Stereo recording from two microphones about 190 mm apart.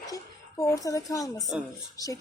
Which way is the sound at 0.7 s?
20° left (ahead or behind).